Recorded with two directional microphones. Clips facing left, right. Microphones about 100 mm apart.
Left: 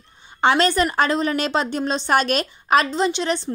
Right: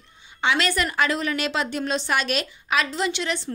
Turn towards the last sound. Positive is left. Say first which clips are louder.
# left 5 dB
turn(degrees=35)  # may be behind; listen again after turning